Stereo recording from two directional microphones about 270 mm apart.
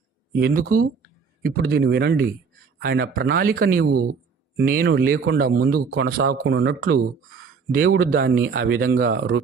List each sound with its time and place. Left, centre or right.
0.3 s a man's voice: right